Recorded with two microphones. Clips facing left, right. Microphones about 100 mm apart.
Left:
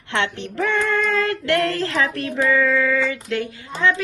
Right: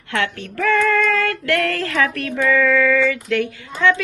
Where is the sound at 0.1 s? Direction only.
25° left (ahead or behind).